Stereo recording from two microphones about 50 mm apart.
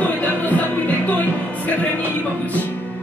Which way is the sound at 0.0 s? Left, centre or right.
Left.